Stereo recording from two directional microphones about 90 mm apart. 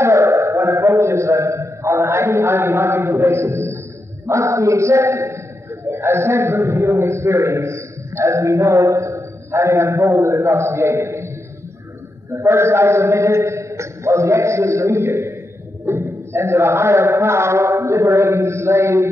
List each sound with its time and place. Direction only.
0.0 s a sound: 35° right (ahead or behind)
5.9 s a man's voice: 25° right (ahead or behind)
12.3 s a man's voice: 30° right (ahead or behind)